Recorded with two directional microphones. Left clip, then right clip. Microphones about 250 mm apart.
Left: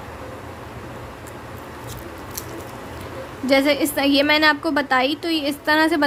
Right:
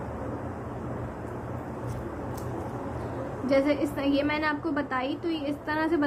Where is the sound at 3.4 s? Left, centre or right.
Left.